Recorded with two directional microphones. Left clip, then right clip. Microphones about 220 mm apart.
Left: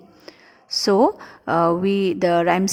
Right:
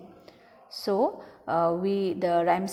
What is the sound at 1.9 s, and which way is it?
Mantra, 55° left (ahead or behind).